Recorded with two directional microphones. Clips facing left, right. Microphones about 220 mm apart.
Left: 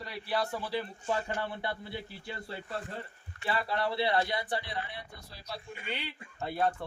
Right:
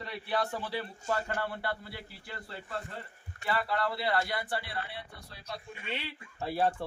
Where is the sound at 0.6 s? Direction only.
15° left (ahead or behind).